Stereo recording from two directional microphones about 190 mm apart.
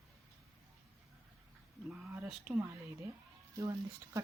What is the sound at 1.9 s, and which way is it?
Speech, 10° right (ahead or behind).